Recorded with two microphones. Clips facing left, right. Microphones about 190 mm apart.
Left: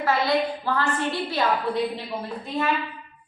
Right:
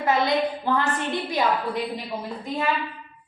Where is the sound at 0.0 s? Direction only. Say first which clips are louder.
Right 1 dB; 20° right (ahead or behind).